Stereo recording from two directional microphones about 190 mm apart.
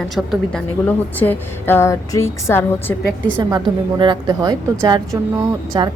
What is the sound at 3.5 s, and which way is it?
Speech, 25° right (ahead or behind).